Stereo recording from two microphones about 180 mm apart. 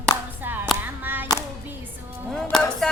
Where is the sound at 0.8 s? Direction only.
10° right (ahead or behind).